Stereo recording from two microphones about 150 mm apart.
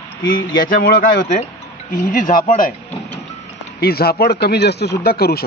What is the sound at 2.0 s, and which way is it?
Speech, 60° left (ahead or behind).